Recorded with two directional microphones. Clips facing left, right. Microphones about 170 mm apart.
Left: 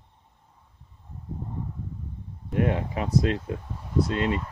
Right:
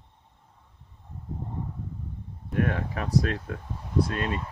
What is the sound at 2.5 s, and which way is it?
Speech, 20° left (ahead or behind).